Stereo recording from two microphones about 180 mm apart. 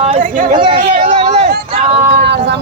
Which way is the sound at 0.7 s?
35° right (ahead or behind).